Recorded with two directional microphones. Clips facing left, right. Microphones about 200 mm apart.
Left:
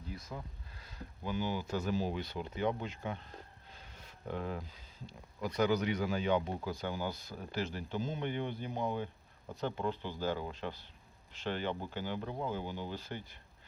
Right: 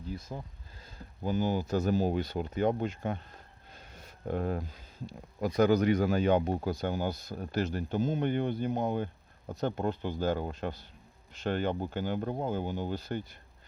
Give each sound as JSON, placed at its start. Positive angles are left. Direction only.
{"t": 0.1, "sound": "speech", "side_deg": -25}
{"t": 1.2, "sound": "speech", "side_deg": -40}
{"t": 3.7, "sound": "a sound", "side_deg": -45}
{"t": 5.4, "sound": "speech", "side_deg": -45}